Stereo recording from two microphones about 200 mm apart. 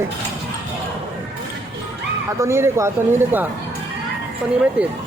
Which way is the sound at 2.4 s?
15° right (ahead or behind).